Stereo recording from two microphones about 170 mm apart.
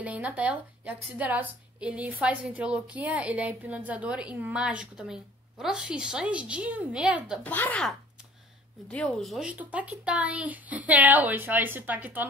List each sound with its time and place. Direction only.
0.0 s a woman's voice: 10° right (ahead or behind)
7.4 s a woman's voice: 10° left (ahead or behind); by 12.3 s 10° right (ahead or behind)